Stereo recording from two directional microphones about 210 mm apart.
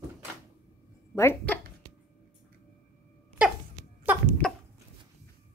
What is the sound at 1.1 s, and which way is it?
Speech, 10° left (ahead or behind).